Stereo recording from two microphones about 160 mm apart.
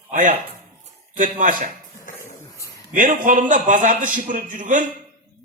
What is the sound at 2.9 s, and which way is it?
A man's voice, 55° right (ahead or behind).